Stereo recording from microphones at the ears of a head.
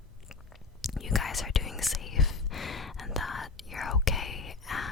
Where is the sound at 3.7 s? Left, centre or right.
Left.